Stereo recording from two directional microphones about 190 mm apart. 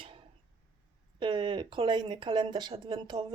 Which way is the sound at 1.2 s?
25° right (ahead or behind).